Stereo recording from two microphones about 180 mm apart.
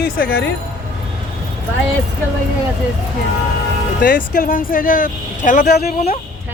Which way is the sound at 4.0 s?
50° left (ahead or behind).